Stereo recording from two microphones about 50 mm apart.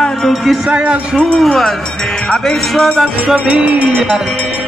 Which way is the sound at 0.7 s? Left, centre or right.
Right.